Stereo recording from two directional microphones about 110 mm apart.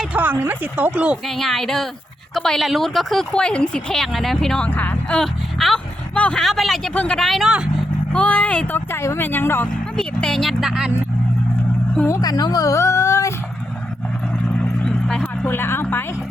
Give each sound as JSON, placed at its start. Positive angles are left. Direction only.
{"t": 0.0, "sound": "speech", "side_deg": -15}
{"t": 1.3, "sound": "speech", "side_deg": 0}
{"t": 8.1, "sound": "speech", "side_deg": 10}
{"t": 10.0, "sound": "speech", "side_deg": 5}
{"t": 12.0, "sound": "speech", "side_deg": 30}
{"t": 14.6, "sound": "vehicle", "side_deg": 5}
{"t": 15.4, "sound": "a woman's voice", "side_deg": 20}